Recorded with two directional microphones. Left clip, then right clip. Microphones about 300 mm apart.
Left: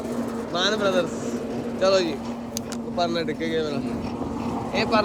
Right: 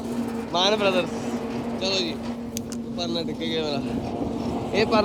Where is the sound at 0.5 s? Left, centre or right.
Centre.